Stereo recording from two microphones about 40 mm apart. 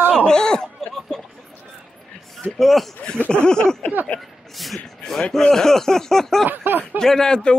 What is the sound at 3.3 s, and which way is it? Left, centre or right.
Speech, left.